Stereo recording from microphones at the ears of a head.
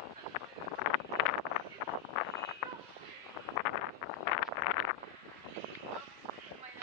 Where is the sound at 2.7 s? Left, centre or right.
Right.